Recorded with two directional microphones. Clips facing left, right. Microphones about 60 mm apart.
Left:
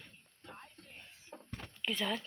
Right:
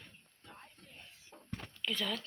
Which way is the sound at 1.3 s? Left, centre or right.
Left.